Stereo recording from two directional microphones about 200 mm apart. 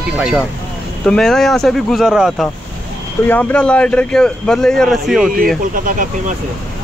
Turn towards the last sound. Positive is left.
turn(degrees=-45)  # may be behind; listen again after turning